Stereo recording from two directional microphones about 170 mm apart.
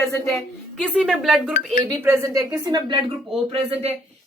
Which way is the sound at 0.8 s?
5° right (ahead or behind).